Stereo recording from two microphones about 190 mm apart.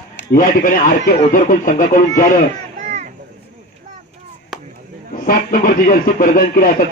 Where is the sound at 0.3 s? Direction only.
45° left (ahead or behind).